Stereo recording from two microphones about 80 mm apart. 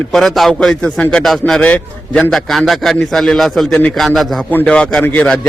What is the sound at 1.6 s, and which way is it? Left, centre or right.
Speech, centre.